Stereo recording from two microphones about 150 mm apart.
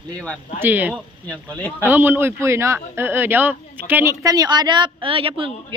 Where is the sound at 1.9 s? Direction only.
15° right (ahead or behind).